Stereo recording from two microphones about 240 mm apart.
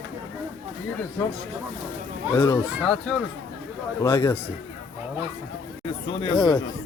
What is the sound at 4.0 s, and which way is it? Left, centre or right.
Speech, centre.